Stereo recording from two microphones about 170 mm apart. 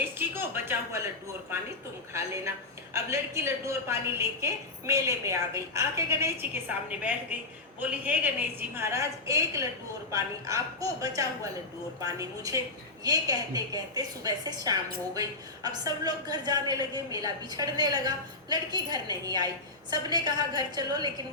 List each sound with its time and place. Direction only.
0.0 s music: 10° right (ahead or behind)
2.1 s a woman's voice: 15° right (ahead or behind)